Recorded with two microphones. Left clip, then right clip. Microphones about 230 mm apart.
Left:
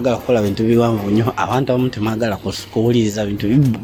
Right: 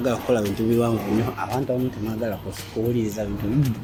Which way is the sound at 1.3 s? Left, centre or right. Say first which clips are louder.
Left 8 dB; left.